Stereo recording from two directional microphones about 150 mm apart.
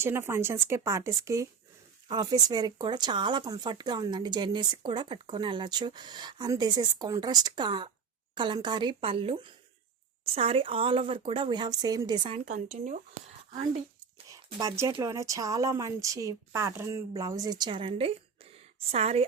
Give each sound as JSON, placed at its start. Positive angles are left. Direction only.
{"t": 0.0, "sound": "speech", "side_deg": -15}
{"t": 12.7, "sound": "speech", "side_deg": -50}
{"t": 14.8, "sound": "speech", "side_deg": -20}
{"t": 18.5, "sound": "a sound", "side_deg": -45}